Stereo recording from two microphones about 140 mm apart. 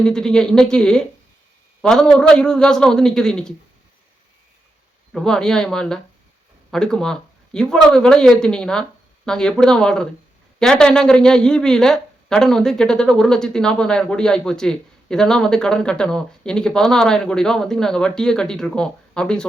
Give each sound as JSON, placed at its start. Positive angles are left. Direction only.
{"t": 0.0, "sound": "a woman's voice", "side_deg": 5}
{"t": 5.1, "sound": "a woman's voice", "side_deg": 5}